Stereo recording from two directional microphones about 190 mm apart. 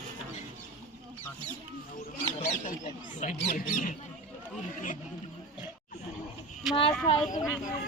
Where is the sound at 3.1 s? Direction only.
45° left (ahead or behind).